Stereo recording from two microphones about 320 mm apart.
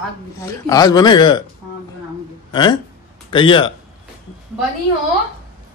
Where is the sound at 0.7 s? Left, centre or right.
Centre.